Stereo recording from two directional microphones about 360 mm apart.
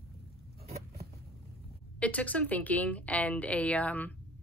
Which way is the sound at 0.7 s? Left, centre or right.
Right.